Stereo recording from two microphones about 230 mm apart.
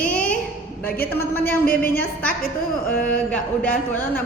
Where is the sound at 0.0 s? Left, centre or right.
Centre.